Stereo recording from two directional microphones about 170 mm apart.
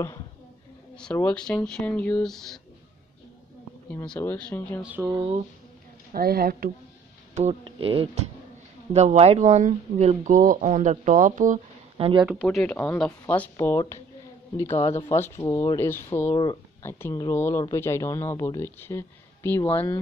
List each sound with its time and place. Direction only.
0.9 s speech: 5° left (ahead or behind)
3.9 s speech: 10° left (ahead or behind)
4.8 s speech: 10° right (ahead or behind)
5.1 s speech: 30° right (ahead or behind)
6.1 s speech: 60° right (ahead or behind)
7.3 s speech: 40° right (ahead or behind)
12.0 s speech: 30° right (ahead or behind)
12.4 s speech: 5° left (ahead or behind)
16.3 s speech: 25° left (ahead or behind)